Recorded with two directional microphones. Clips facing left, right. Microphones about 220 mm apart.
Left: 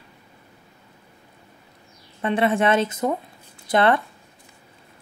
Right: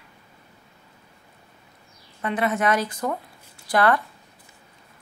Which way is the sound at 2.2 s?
30° left (ahead or behind).